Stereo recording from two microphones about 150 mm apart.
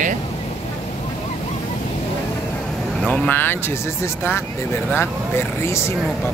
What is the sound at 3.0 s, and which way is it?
Speech, 5° left (ahead or behind).